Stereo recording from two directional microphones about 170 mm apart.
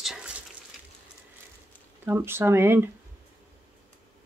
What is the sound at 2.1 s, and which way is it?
Speech, 15° right (ahead or behind).